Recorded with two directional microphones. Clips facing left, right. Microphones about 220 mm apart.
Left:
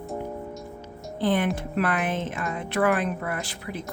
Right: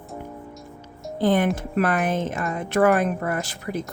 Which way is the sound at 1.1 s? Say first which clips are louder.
Right 4 dB; 40° right (ahead or behind).